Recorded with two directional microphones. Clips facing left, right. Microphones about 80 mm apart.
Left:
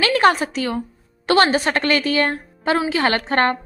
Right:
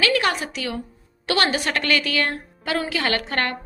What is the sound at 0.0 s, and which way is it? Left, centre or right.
A woman's voice, left.